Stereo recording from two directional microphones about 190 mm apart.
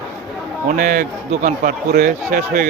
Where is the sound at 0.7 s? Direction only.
45° right (ahead or behind).